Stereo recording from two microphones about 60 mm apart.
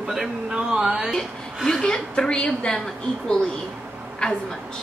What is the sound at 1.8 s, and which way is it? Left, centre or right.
Speech, centre.